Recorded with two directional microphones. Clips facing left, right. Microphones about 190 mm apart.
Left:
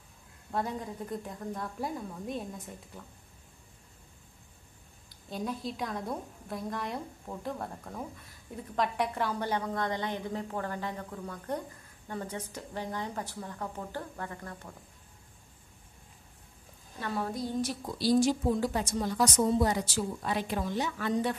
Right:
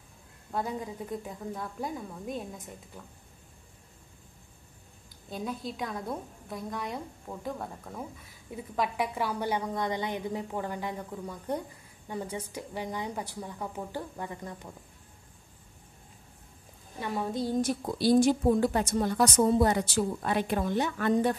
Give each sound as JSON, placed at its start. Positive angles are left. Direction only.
{"t": 0.5, "sound": "a woman's voice", "side_deg": 0}
{"t": 5.3, "sound": "a woman's voice", "side_deg": 0}
{"t": 17.0, "sound": "a woman's voice", "side_deg": -15}
{"t": 17.6, "sound": "a woman's voice", "side_deg": -50}